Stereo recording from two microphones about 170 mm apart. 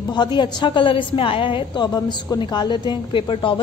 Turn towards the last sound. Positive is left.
turn(degrees=30)  # may be behind; listen again after turning